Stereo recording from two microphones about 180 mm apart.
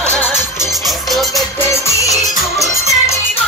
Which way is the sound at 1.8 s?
15° left (ahead or behind).